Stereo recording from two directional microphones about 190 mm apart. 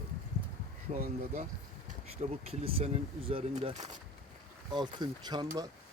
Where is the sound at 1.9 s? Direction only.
35° right (ahead or behind).